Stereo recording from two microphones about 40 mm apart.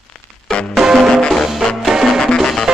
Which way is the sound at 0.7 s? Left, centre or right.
Centre.